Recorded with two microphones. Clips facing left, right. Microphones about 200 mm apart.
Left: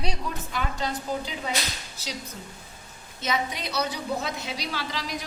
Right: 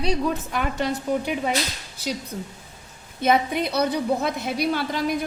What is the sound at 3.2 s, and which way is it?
A woman's voice, 55° right (ahead or behind).